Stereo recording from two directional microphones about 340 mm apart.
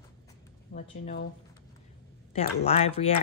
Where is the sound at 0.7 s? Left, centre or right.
Left.